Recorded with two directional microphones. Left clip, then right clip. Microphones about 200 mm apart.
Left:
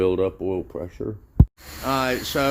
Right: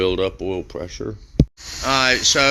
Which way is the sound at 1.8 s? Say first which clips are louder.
Right 7 dB; 10° left (ahead or behind).